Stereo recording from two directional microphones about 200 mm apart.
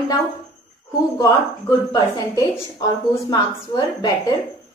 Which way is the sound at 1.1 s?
15° left (ahead or behind).